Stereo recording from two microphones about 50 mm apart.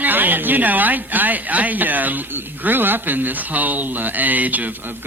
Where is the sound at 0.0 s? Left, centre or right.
Right.